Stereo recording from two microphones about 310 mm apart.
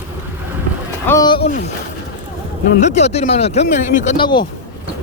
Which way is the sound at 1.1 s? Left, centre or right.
Centre.